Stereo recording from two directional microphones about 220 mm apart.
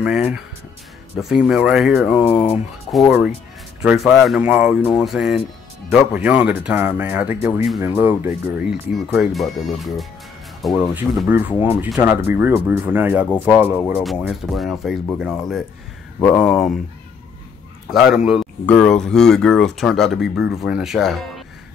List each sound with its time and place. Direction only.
0.0 s speech: 5° right (ahead or behind)
2.2 s speech: 25° left (ahead or behind)
2.9 s speech: centre (ahead or behind)
17.8 s speech: centre (ahead or behind)